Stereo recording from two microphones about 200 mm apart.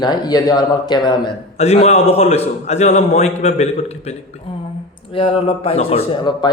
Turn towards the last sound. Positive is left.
turn(degrees=25)  # may be behind; listen again after turning